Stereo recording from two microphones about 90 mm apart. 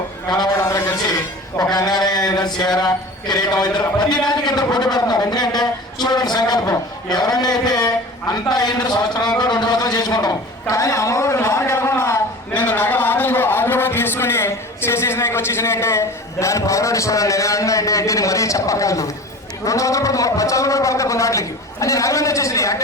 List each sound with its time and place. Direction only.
0.5 s a sound: 30° left (ahead or behind)
1.0 s music: 45° left (ahead or behind)
1.7 s a man's voice: 50° left (ahead or behind); by 12.2 s 30° left (ahead or behind)
12.5 s a man's voice: 20° left (ahead or behind); by 22.8 s 35° left (ahead or behind)